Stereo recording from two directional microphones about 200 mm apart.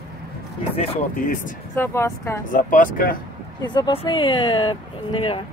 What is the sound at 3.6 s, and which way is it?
Speech, 25° left (ahead or behind).